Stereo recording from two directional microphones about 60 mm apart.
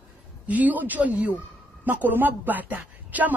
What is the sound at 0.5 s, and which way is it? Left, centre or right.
Speech, right.